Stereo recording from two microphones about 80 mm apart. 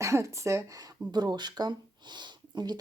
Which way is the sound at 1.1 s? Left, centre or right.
Right.